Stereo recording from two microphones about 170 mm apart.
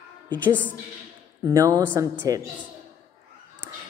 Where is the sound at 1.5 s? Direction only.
20° right (ahead or behind).